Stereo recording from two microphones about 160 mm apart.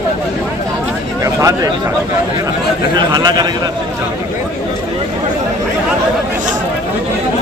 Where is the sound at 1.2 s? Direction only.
20° right (ahead or behind).